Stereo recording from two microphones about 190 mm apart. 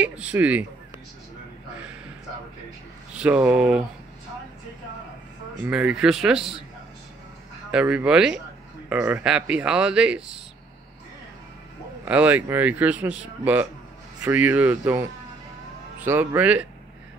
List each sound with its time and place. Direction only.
0.0 s speech: 5° right (ahead or behind)
3.2 s speech: 5° right (ahead or behind)
5.7 s speech: 5° right (ahead or behind)
7.7 s speech: 5° right (ahead or behind)
12.0 s speech: 5° right (ahead or behind)
16.0 s speech: 10° right (ahead or behind)